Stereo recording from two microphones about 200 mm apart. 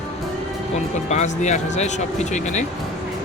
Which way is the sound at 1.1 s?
35° left (ahead or behind).